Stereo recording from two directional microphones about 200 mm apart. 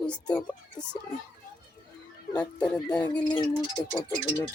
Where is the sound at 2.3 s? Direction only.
5° left (ahead or behind).